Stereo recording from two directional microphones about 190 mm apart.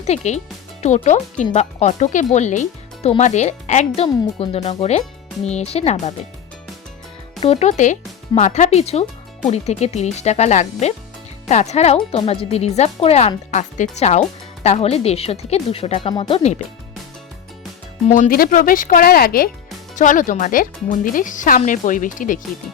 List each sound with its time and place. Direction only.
0.0 s speech: 35° left (ahead or behind)
7.4 s speech: 35° left (ahead or behind)
18.1 s speech: 45° left (ahead or behind)